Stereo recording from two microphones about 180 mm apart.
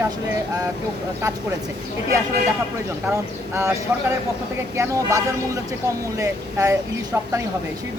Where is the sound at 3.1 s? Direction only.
15° right (ahead or behind).